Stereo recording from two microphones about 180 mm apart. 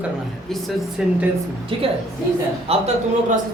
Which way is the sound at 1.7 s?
30° right (ahead or behind).